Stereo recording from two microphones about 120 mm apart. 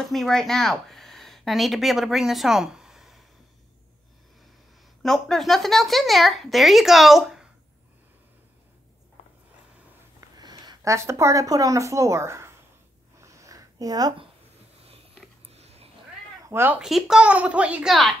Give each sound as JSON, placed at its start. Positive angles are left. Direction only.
{"t": 0.0, "sound": "speech", "side_deg": 5}
{"t": 5.0, "sound": "speech", "side_deg": 0}
{"t": 9.2, "sound": "a sound", "side_deg": 65}
{"t": 10.3, "sound": "speech", "side_deg": -35}
{"t": 13.2, "sound": "a sound", "side_deg": -25}
{"t": 15.4, "sound": "sniff", "side_deg": -60}
{"t": 16.4, "sound": "speech", "side_deg": -20}
{"t": 16.8, "sound": "speech", "side_deg": -5}